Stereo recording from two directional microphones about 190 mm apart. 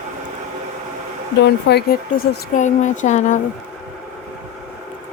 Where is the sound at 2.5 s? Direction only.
40° left (ahead or behind).